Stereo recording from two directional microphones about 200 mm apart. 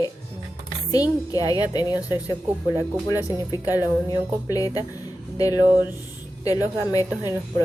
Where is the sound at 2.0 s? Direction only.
10° right (ahead or behind).